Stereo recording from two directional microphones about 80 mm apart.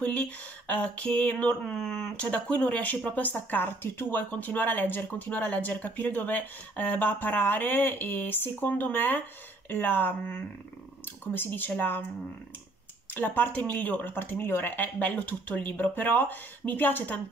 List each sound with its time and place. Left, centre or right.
0.0 s speech: centre
1.6 s speech: centre; by 12.0 s left
13.1 s speech: left